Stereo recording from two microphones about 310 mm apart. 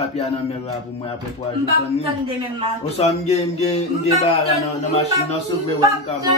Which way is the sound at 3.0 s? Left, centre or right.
Centre.